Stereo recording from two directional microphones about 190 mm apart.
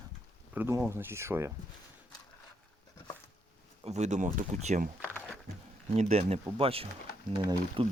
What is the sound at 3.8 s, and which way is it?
Speech, 35° right (ahead or behind).